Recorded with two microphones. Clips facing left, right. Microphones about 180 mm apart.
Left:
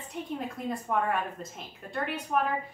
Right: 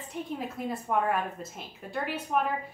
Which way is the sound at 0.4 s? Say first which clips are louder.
Even; 5° right (ahead or behind).